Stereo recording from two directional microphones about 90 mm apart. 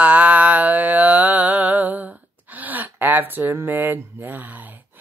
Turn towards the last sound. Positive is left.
turn(degrees=-20)  # may be behind; listen again after turning